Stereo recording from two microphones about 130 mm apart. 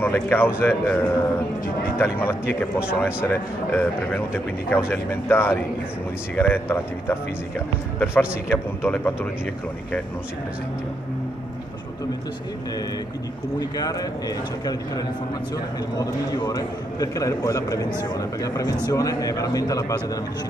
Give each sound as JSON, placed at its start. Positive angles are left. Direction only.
{"t": 0.0, "sound": "speech", "side_deg": 15}
{"t": 13.6, "sound": "a man's voice", "side_deg": 30}